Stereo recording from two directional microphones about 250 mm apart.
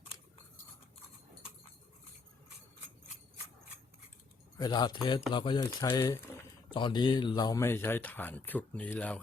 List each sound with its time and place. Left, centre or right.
4.5 s speech: centre